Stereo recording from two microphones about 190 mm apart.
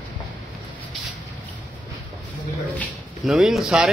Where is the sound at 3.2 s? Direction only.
Centre (ahead or behind).